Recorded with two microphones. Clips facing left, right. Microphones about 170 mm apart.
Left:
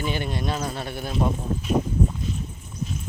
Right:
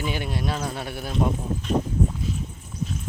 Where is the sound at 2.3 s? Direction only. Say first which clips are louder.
Right 1 dB; 5° right (ahead or behind).